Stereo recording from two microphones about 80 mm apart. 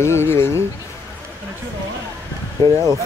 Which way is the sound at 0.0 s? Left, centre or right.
Left.